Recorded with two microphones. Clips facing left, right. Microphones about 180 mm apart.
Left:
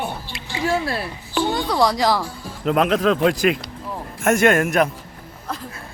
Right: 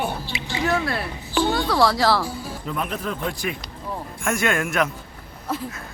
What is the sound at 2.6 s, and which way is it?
Speech, 85° left.